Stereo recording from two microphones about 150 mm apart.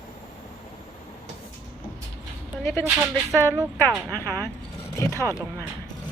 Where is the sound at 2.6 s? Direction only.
15° left (ahead or behind).